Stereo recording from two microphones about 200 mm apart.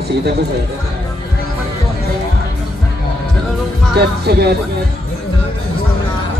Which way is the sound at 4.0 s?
55° right (ahead or behind).